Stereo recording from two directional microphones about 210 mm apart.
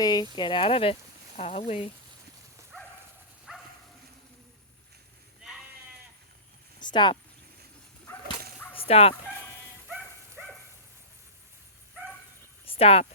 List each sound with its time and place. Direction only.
0.0 s speech: 20° left (ahead or behind)
3.5 s dog: 5° right (ahead or behind)
6.7 s speech: 20° left (ahead or behind)
8.7 s fowl: 30° left (ahead or behind)
12.6 s a sound: 25° left (ahead or behind)